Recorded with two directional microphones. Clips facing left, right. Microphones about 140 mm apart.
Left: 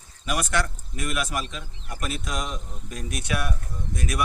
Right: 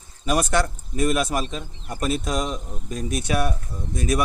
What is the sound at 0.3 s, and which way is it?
Speech, 35° right (ahead or behind).